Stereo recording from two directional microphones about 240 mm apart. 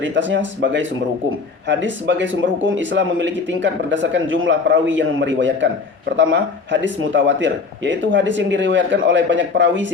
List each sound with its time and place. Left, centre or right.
0.0 s speech: right